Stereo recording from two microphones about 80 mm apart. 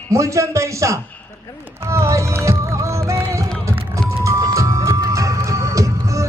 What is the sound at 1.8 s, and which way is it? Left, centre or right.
Music, right.